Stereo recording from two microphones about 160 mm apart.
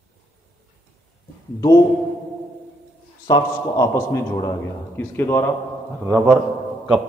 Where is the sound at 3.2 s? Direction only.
25° left (ahead or behind).